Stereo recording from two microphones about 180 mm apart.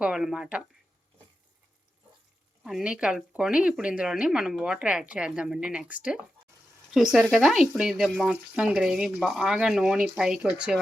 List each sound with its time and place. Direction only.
0.0 s speech: 5° right (ahead or behind)
2.6 s speech: 5° right (ahead or behind)